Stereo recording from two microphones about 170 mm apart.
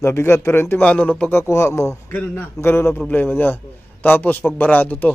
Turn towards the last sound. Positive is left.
turn(degrees=10)  # may be behind; listen again after turning